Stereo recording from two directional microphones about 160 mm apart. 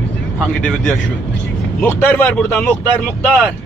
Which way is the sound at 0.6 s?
5° left (ahead or behind).